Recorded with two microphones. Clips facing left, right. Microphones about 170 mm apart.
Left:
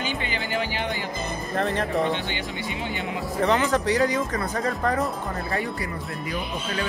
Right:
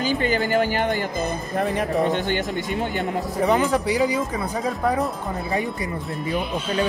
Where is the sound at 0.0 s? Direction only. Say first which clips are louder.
Right 8 dB; 40° right (ahead or behind).